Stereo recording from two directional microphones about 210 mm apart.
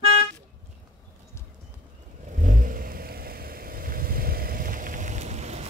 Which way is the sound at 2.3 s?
35° right (ahead or behind).